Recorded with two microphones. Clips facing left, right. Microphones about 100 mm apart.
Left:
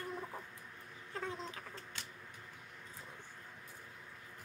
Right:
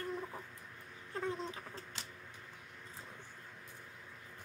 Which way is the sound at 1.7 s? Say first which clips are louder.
Right 1 dB; 30° right (ahead or behind).